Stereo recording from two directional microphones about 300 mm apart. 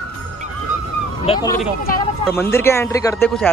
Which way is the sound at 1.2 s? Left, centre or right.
Centre.